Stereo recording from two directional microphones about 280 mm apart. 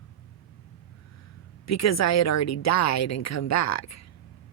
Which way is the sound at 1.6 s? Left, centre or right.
Left.